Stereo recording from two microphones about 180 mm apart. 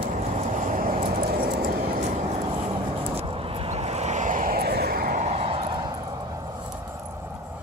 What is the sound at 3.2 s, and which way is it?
Vehicle, 35° right (ahead or behind).